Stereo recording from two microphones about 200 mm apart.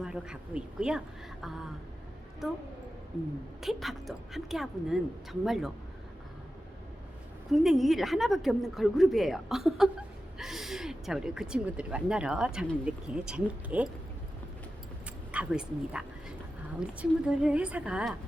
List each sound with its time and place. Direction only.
0.0 s speech: 5° right (ahead or behind)
3.6 s speech: centre (ahead or behind)
7.5 s speech: centre (ahead or behind)
15.3 s speech: 5° right (ahead or behind)